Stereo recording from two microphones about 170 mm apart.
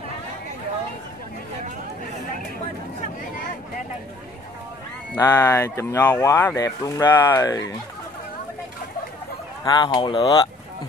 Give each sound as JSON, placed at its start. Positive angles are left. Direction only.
{"t": 5.2, "sound": "speech", "side_deg": 15}
{"t": 9.7, "sound": "speech", "side_deg": 25}